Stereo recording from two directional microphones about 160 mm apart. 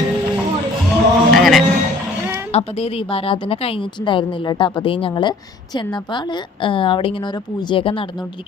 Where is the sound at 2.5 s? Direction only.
40° left (ahead or behind).